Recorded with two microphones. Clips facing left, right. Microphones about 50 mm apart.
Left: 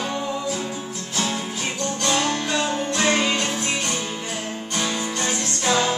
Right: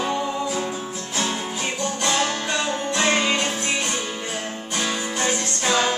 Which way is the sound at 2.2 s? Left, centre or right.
Centre.